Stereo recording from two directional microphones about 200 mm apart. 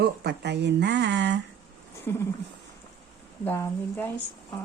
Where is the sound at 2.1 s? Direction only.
10° left (ahead or behind).